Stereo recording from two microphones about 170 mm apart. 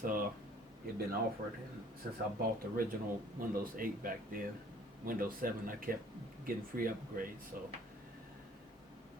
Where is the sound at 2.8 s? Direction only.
60° right (ahead or behind).